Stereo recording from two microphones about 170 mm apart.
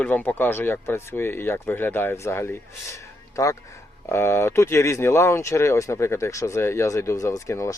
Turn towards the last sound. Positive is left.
turn(degrees=20)  # may be behind; listen again after turning